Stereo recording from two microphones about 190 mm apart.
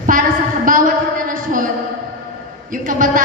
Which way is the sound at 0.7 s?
45° right (ahead or behind).